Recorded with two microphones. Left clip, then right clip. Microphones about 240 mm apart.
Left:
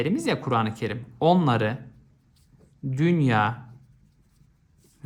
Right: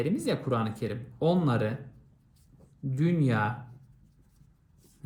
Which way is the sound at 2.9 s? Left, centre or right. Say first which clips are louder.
Left 6 dB; left.